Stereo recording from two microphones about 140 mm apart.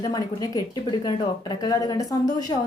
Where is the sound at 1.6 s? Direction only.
25° left (ahead or behind).